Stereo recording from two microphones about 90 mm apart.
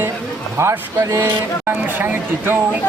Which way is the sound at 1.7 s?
20° right (ahead or behind).